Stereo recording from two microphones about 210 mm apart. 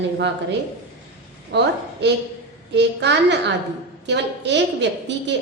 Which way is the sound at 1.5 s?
55° right (ahead or behind).